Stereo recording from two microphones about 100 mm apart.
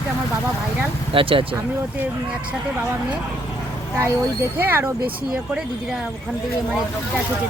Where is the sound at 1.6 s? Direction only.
15° right (ahead or behind).